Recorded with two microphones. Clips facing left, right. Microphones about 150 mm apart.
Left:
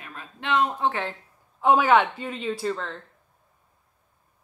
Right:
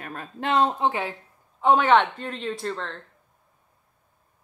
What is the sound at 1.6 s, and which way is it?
Speech, 5° left (ahead or behind).